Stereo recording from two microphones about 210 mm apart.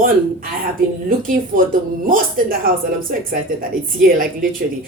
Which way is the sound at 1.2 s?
40° right (ahead or behind).